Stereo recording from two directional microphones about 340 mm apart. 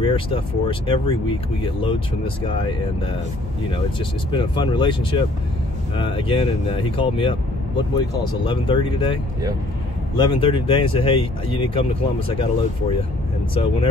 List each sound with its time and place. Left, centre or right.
0.0 s speech: centre
4.3 s speech: centre